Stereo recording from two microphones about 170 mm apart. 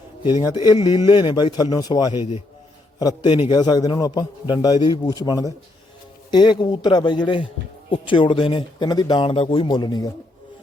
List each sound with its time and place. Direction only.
0.4 s speech: 25° left (ahead or behind)